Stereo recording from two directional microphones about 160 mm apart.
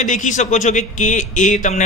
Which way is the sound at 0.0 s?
50° left (ahead or behind).